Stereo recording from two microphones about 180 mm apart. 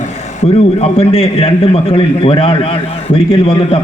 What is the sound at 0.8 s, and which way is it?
A man's voice, 35° left (ahead or behind).